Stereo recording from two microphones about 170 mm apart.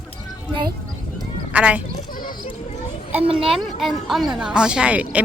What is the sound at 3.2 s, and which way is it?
Speech, 30° right (ahead or behind).